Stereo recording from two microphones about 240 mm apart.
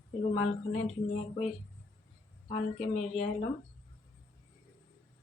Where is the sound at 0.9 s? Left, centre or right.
Left.